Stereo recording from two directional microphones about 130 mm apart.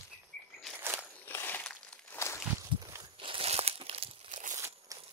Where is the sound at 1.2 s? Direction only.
15° left (ahead or behind).